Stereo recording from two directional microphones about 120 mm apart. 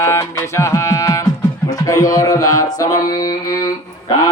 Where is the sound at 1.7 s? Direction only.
30° left (ahead or behind).